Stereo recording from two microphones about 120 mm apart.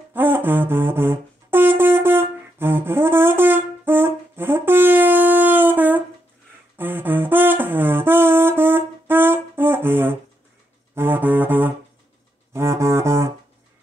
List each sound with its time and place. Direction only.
0.1 s brass instrument: 15° right (ahead or behind)
6.8 s music: 15° right (ahead or behind)